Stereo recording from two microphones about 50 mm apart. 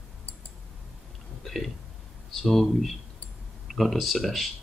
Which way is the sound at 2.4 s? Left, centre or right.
Centre.